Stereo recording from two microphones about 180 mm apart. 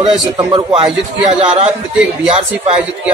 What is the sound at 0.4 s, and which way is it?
Speech, 25° right (ahead or behind).